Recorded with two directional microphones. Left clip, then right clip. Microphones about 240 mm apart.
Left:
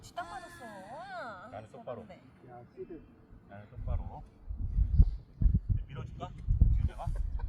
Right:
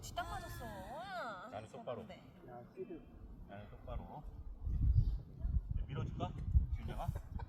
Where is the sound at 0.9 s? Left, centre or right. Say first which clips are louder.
Left 2 dB; right.